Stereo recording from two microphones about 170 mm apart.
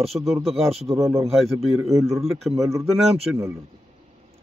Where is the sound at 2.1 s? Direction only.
Centre (ahead or behind).